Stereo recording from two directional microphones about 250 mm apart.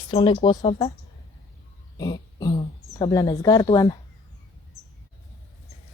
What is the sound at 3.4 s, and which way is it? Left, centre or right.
Speech, centre.